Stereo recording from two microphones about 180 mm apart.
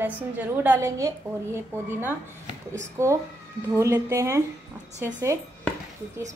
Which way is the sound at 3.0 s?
15° right (ahead or behind).